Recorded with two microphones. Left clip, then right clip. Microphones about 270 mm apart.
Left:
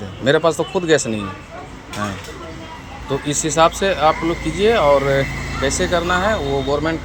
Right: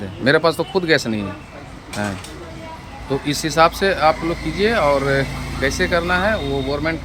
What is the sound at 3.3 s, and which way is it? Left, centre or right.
Speech, right.